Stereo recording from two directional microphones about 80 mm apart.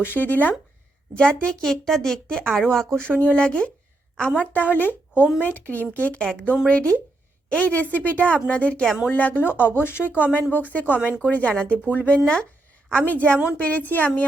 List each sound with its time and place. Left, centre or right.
0.0 s speech: left